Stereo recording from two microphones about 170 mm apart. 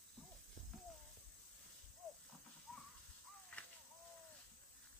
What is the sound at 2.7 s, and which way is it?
Crow, 5° left (ahead or behind).